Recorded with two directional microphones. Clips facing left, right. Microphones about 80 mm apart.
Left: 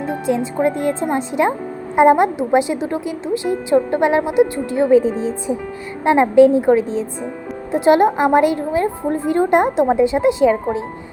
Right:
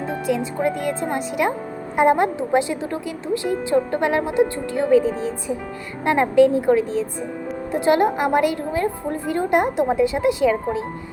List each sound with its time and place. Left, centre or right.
0.3 s a woman's voice: left